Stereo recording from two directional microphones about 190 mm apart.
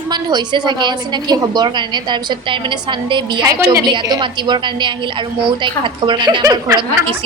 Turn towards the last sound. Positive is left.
turn(degrees=-25)  # may be behind; listen again after turning